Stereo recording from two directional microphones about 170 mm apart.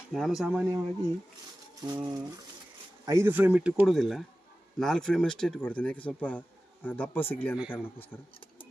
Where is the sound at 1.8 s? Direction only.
25° right (ahead or behind); by 8.1 s 10° left (ahead or behind).